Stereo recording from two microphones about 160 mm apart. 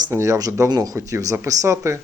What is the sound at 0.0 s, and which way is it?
Speech, 20° right (ahead or behind).